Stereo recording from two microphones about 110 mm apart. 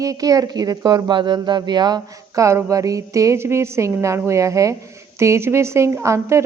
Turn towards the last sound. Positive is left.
turn(degrees=-25)  # may be behind; listen again after turning